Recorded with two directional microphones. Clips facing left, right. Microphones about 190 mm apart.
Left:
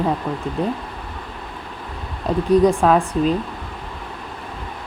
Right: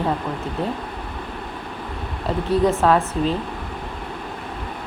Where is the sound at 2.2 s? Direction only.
15° left (ahead or behind).